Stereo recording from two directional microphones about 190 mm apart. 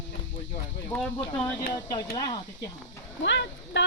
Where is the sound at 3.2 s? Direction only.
70° left (ahead or behind).